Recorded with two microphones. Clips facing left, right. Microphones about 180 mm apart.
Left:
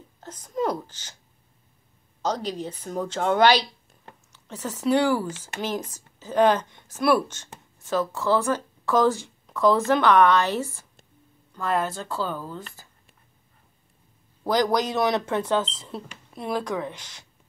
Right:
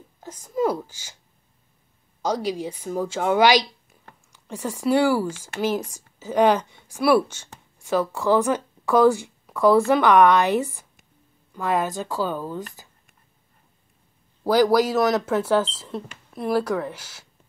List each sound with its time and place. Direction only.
0.2 s a woman's voice: 10° right (ahead or behind)
2.2 s a woman's voice: 10° right (ahead or behind)
14.4 s a woman's voice: 10° right (ahead or behind)